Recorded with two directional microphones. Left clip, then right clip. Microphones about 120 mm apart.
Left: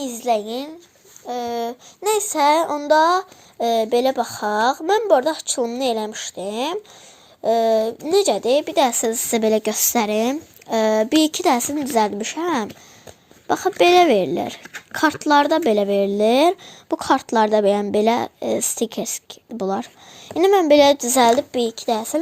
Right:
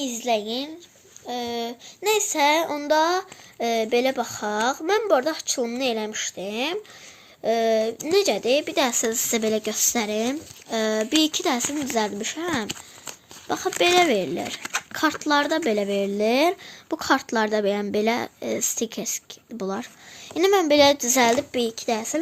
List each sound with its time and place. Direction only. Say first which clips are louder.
0.0 s a child's voice: left 3 dB; 65° left (ahead or behind); by 9.5 s 45° left (ahead or behind)
9.5 s a child's voice: left 5 dB; 65° left (ahead or behind); by 20.7 s 35° left (ahead or behind)
20.7 s a child's voice: left 4 dB; 50° left (ahead or behind)